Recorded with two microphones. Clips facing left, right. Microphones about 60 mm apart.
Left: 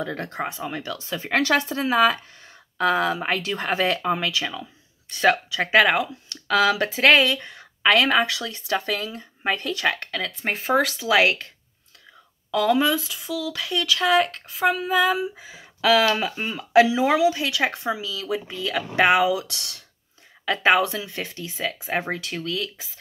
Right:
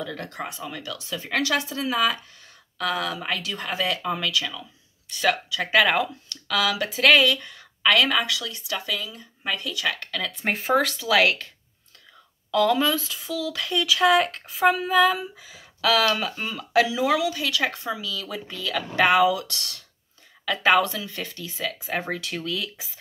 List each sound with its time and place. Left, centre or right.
0.0 s speech: left
2.8 s speech: left
4.0 s speech: left
10.2 s speech: centre
11.0 s speech: centre
12.4 s speech: centre
15.4 s speech: left
22.2 s speech: centre